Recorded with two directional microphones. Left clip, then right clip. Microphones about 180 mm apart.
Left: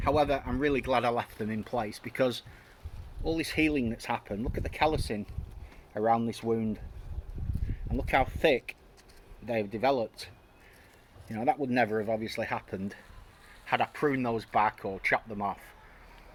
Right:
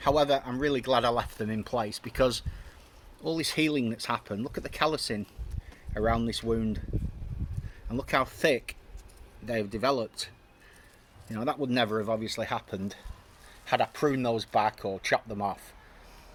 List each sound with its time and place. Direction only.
0.0 s speech: 25° right (ahead or behind)
3.3 s speech: 35° right (ahead or behind)
7.9 s speech: 30° right (ahead or behind)